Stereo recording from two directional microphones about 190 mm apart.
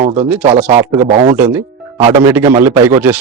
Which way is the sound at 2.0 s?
25° right (ahead or behind).